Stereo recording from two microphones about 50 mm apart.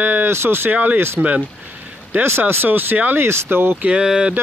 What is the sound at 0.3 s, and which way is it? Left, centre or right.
Speech, right.